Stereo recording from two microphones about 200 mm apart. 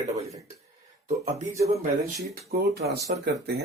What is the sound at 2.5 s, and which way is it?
Speech, 45° right (ahead or behind).